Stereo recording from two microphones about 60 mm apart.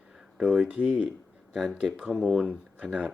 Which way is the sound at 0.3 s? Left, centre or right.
Centre.